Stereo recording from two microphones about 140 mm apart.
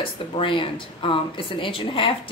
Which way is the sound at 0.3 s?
40° left (ahead or behind).